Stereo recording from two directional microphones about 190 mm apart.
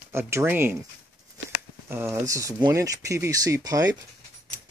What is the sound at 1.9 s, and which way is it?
Speech, 15° right (ahead or behind).